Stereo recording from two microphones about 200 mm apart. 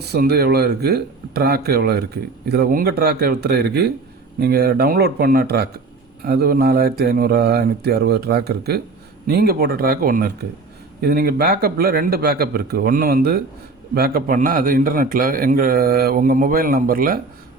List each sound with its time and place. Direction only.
0.0 s a man's voice: 55° right (ahead or behind)